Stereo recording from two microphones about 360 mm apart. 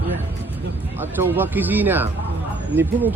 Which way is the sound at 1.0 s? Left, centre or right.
Centre.